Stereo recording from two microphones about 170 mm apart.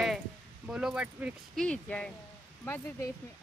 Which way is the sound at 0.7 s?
5° right (ahead or behind).